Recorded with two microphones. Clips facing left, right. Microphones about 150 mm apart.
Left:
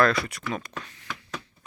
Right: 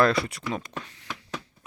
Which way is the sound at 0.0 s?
30° right (ahead or behind).